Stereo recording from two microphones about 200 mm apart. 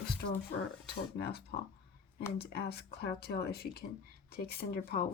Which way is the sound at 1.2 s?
50° left (ahead or behind).